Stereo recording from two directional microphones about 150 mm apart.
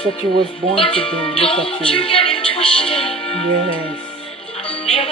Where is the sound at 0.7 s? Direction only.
40° left (ahead or behind).